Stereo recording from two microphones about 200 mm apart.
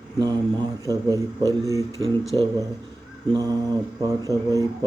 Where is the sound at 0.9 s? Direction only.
15° right (ahead or behind).